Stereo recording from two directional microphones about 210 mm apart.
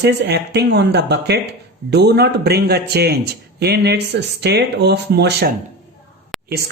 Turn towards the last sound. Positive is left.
turn(degrees=0)  # may be behind; listen again after turning